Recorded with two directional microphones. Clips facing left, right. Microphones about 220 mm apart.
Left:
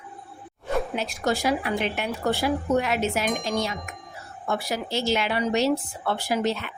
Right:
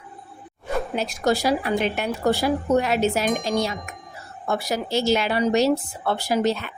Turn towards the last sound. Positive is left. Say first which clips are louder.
# right 3 dB
turn(degrees=-40)  # may be behind; listen again after turning